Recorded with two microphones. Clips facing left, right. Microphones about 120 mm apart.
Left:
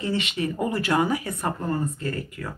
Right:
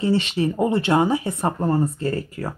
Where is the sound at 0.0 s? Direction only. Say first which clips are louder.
Right 6 dB; 35° right (ahead or behind).